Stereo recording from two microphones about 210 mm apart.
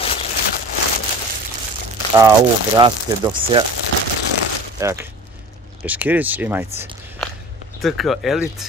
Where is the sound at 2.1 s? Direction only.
20° right (ahead or behind).